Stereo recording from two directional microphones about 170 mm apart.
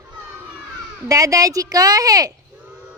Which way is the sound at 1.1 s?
20° right (ahead or behind).